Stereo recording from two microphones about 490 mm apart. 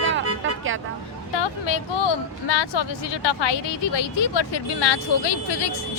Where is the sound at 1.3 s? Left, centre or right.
Left.